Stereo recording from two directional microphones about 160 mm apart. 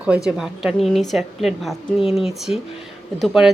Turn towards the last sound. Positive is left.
turn(degrees=0)  # may be behind; listen again after turning